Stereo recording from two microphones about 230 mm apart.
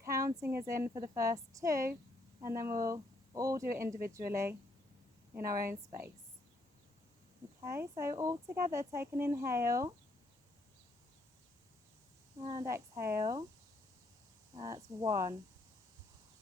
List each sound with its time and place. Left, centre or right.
0.0 s speech: centre
5.5 s a woman's voice: right
7.6 s speech: centre
12.4 s speech: centre
14.5 s speech: centre